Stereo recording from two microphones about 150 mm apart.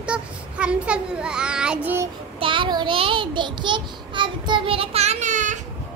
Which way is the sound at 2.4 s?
35° right (ahead or behind).